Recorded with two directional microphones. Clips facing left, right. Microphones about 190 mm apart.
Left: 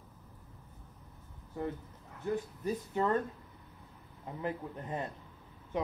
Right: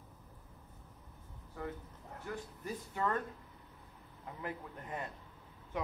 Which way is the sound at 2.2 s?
20° left (ahead or behind).